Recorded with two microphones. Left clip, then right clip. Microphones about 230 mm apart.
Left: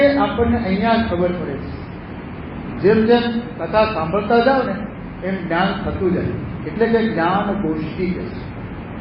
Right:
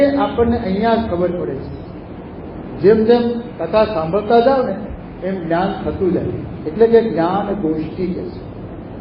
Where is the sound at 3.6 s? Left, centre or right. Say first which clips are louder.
Right 2 dB; centre.